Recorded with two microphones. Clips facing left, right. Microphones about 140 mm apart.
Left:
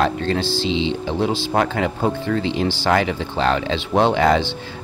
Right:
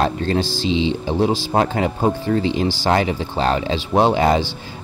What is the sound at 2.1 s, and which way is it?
Speech, 40° right (ahead or behind).